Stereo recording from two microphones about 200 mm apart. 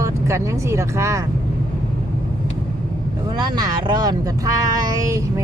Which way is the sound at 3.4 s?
20° right (ahead or behind).